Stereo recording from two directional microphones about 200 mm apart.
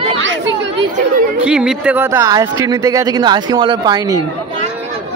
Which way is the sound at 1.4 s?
5° right (ahead or behind).